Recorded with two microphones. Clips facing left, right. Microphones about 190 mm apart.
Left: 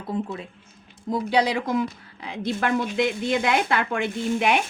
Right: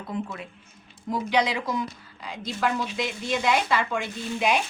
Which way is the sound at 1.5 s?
50° left (ahead or behind).